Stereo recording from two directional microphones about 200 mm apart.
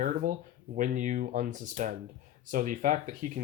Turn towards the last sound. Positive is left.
turn(degrees=-40)  # may be behind; listen again after turning